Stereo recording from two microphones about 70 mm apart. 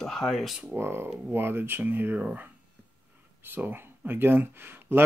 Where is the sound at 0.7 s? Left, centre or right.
Right.